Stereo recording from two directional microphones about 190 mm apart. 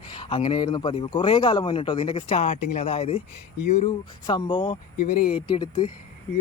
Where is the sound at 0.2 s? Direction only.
25° left (ahead or behind).